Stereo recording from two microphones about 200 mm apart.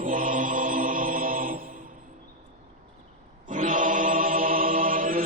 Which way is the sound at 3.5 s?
40° right (ahead or behind).